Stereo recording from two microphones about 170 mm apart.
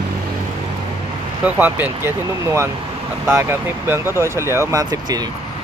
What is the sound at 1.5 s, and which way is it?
Speech, 10° right (ahead or behind).